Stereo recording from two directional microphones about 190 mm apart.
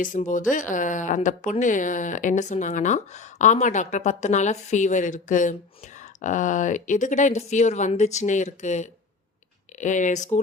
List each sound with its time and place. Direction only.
0.0 s speech: 45° left (ahead or behind)